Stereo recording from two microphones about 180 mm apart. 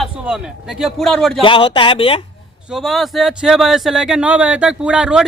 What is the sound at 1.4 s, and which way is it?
Speech, 30° left (ahead or behind).